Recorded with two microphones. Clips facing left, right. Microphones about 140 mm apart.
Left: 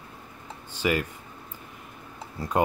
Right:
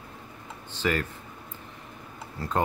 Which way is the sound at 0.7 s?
10° left (ahead or behind).